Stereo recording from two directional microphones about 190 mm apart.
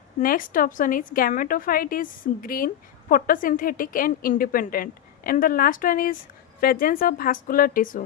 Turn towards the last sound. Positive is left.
turn(degrees=45)  # may be behind; listen again after turning